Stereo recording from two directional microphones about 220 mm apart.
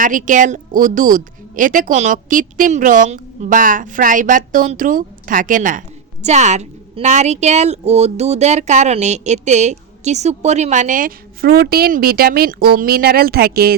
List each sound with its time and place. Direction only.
0.0 s a woman's voice: 35° right (ahead or behind)